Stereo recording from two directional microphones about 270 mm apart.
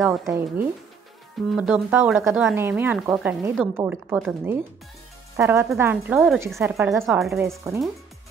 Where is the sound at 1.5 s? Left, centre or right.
Centre.